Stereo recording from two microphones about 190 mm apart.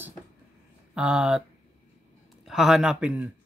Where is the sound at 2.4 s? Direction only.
Centre (ahead or behind).